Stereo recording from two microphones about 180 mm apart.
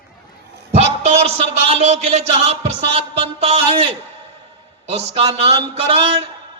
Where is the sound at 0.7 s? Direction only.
40° right (ahead or behind).